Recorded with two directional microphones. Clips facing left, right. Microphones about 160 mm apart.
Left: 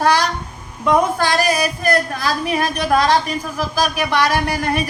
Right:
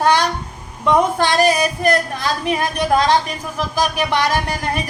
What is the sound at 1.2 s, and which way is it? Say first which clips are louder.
A woman's voice: right 2 dB; 20° right (ahead or behind).